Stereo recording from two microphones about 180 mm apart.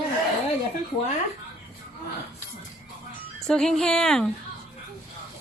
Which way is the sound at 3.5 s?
5° left (ahead or behind).